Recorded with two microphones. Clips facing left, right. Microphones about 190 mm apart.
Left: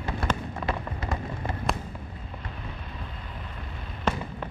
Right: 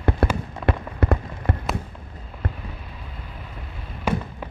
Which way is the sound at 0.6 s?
60° right (ahead or behind).